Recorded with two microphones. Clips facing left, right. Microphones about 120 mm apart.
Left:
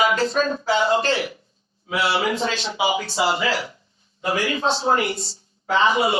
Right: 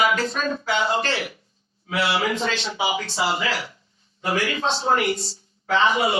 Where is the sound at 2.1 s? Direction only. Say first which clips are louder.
Left 2 dB; 30° left (ahead or behind).